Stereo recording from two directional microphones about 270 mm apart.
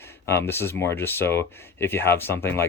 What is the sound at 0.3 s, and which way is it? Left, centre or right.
Speech, centre.